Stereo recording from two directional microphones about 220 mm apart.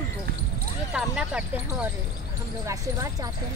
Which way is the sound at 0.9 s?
5° right (ahead or behind).